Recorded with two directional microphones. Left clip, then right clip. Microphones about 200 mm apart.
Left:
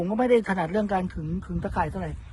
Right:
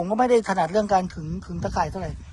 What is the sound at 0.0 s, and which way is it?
Speech, 30° right (ahead or behind).